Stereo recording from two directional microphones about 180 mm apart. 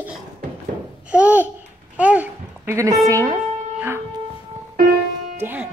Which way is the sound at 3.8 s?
10° right (ahead or behind).